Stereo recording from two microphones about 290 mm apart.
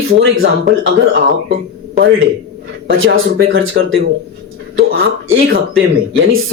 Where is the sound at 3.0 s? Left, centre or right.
Right.